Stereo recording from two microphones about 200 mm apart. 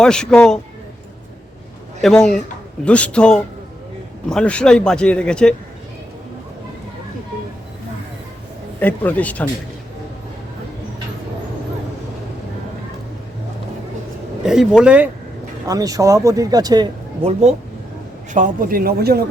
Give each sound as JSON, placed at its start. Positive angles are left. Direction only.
{"t": 0.0, "sound": "a man's voice", "side_deg": 5}
{"t": 2.0, "sound": "a man's voice", "side_deg": 0}
{"t": 8.8, "sound": "speech", "side_deg": 10}
{"t": 14.4, "sound": "a man's voice", "side_deg": -5}
{"t": 15.6, "sound": "speech", "side_deg": -15}
{"t": 18.3, "sound": "a man's voice", "side_deg": -40}